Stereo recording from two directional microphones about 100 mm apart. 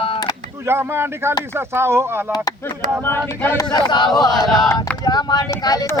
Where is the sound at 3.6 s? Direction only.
45° left (ahead or behind).